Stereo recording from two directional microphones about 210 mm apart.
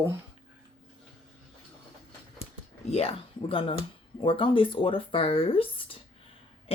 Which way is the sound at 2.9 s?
30° left (ahead or behind).